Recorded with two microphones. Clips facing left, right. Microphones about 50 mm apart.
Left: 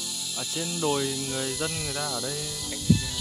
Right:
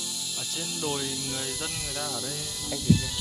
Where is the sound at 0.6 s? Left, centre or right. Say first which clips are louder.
Left 5 dB; centre.